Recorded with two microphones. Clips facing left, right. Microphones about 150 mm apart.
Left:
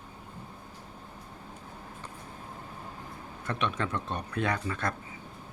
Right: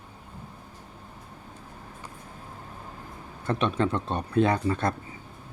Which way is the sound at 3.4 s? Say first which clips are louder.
Right 6 dB; 30° right (ahead or behind).